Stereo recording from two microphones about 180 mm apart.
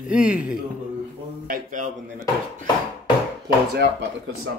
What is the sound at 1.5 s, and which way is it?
Speech, 45° right (ahead or behind).